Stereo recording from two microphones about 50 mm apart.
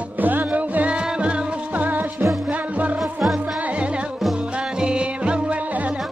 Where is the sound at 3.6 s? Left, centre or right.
Right.